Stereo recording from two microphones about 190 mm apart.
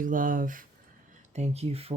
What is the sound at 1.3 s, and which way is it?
Speech, 35° right (ahead or behind).